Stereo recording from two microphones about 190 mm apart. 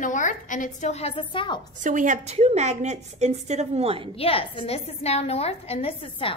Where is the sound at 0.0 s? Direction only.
40° left (ahead or behind); by 1.6 s 25° left (ahead or behind).